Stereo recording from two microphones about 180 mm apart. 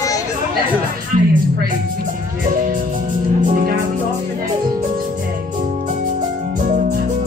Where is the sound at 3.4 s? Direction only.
50° right (ahead or behind).